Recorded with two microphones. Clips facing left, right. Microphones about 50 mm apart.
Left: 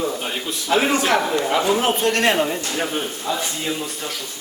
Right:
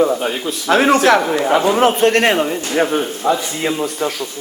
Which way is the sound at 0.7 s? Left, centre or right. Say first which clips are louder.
Right 6 dB; right.